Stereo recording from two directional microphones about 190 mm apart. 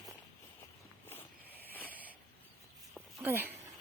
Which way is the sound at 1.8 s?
10° right (ahead or behind).